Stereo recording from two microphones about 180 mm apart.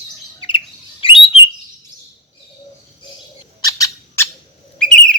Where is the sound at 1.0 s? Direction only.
30° left (ahead or behind).